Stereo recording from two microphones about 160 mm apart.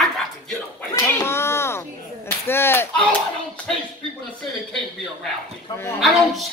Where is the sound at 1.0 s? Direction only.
15° left (ahead or behind).